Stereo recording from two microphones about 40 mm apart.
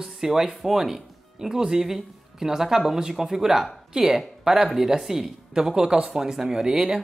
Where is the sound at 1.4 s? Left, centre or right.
Centre.